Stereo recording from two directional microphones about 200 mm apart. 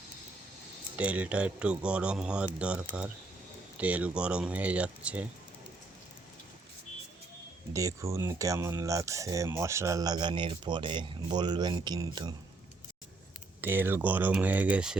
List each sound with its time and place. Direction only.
0.9 s speech: 5° right (ahead or behind)
7.7 s speech: 15° right (ahead or behind)
13.6 s speech: 10° right (ahead or behind)